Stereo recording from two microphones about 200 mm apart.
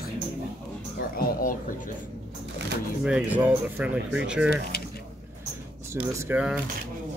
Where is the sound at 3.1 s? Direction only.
5° right (ahead or behind).